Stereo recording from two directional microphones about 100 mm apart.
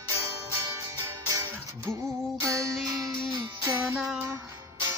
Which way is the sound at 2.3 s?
30° right (ahead or behind).